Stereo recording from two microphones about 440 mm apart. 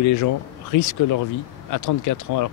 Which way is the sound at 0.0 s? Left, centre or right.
Left.